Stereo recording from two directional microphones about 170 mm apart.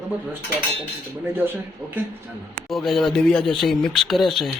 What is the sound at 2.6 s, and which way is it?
Speech, centre (ahead or behind).